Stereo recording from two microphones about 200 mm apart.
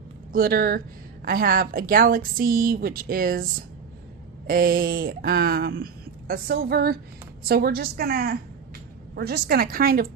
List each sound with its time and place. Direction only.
0.3 s speech: 50° right (ahead or behind)
4.4 s speech: 45° right (ahead or behind)